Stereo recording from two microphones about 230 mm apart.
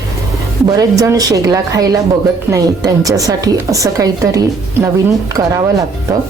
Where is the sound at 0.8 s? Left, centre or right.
Centre.